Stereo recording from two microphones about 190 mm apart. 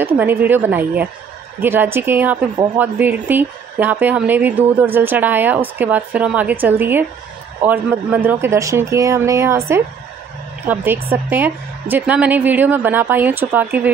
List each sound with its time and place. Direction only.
0.0 s speech: 10° right (ahead or behind)
2.5 s speech: 25° right (ahead or behind)
2.8 s speech: 10° right (ahead or behind)
10.7 s speech: 10° right (ahead or behind)